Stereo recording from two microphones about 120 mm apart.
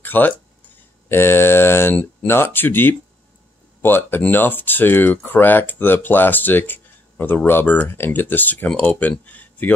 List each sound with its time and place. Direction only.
0.0 s speech: 15° left (ahead or behind)